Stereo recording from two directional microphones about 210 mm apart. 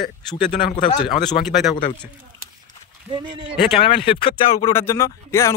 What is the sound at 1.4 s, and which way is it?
Speech, centre (ahead or behind).